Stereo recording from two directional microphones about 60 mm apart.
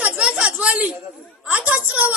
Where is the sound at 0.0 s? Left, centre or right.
Right.